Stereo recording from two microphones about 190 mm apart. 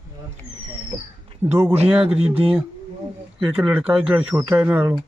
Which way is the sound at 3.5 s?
5° right (ahead or behind).